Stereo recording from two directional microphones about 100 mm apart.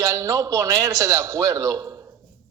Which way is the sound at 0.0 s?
35° right (ahead or behind).